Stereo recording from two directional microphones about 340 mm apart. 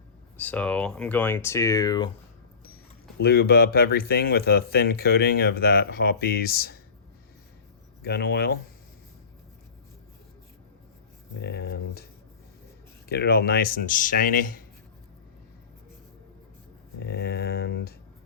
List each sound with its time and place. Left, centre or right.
0.3 s speech: centre
3.2 s speech: left
8.0 s speech: left
11.3 s speech: left
13.1 s speech: left
17.0 s speech: left